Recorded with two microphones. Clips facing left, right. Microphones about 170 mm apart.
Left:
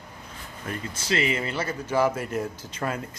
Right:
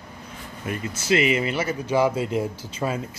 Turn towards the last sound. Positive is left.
turn(degrees=-10)  # may be behind; listen again after turning